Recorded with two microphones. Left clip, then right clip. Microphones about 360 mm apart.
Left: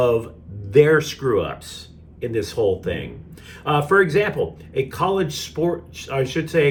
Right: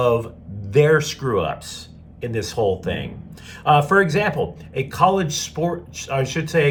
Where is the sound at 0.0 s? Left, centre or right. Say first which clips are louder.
Even; centre.